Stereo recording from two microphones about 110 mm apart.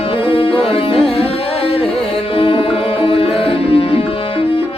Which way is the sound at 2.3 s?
55° left (ahead or behind).